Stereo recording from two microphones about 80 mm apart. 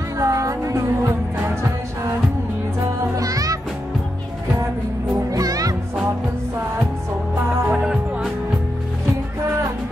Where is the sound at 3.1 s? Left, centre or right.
Right.